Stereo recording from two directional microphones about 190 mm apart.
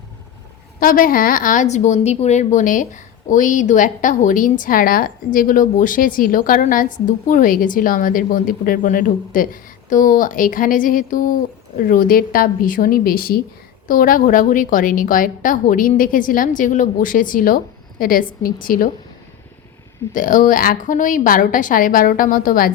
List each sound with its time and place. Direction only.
0.8 s speech: 50° left (ahead or behind)
20.1 s speech: 45° left (ahead or behind)